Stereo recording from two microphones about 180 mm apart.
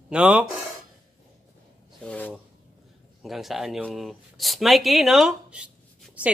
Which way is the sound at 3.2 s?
Centre (ahead or behind).